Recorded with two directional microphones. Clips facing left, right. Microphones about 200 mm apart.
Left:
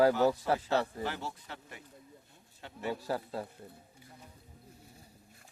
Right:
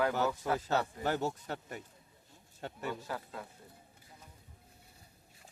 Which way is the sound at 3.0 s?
35° left (ahead or behind).